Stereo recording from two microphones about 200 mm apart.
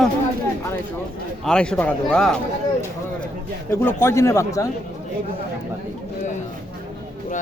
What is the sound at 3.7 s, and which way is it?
A man's voice, 10° left (ahead or behind).